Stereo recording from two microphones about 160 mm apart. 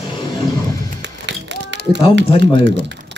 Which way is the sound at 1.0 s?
90° right.